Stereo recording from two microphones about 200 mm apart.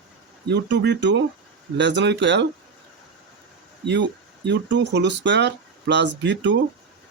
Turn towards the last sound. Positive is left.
turn(degrees=-65)  # may be behind; listen again after turning